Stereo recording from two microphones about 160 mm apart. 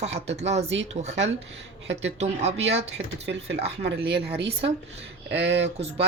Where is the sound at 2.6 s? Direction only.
90° right.